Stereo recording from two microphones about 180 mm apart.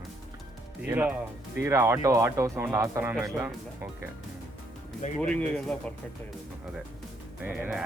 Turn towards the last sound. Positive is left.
turn(degrees=-5)  # may be behind; listen again after turning